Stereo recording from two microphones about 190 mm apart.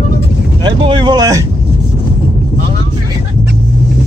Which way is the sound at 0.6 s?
25° right (ahead or behind).